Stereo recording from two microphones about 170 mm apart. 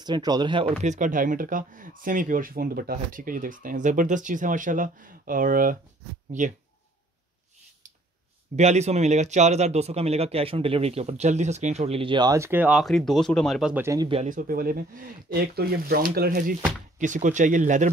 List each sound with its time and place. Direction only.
0.0 s speech: 25° right (ahead or behind)
0.8 s speech: 50° right (ahead or behind)
8.5 s speech: 40° right (ahead or behind); by 13.8 s 5° right (ahead or behind)
13.8 s speech: 20° right (ahead or behind)
14.1 s speech: 50° right (ahead or behind)
17.0 s speech: 45° right (ahead or behind)